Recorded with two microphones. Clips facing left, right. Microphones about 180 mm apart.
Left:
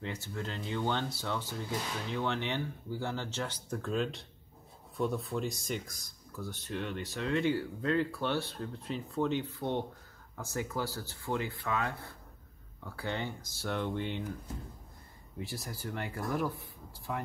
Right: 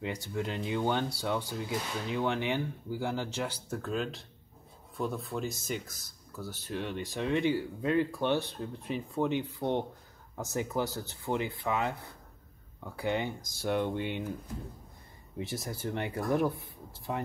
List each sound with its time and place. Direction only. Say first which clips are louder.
0.0 s speech: right 4 dB; 15° right (ahead or behind)
15.3 s speech: right 4 dB; 20° right (ahead or behind)